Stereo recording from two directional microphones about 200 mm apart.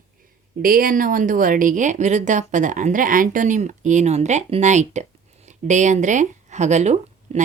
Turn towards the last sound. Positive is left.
turn(degrees=-35)  # may be behind; listen again after turning